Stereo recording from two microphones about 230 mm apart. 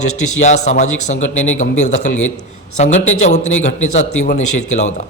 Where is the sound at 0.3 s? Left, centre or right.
Left.